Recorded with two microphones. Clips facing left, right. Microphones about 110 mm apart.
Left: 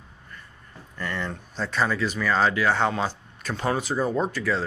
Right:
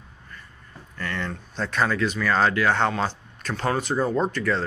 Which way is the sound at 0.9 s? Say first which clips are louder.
Even; 10° left (ahead or behind).